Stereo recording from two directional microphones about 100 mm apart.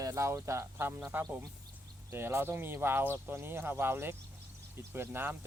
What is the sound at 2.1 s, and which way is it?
Speech, 25° right (ahead or behind).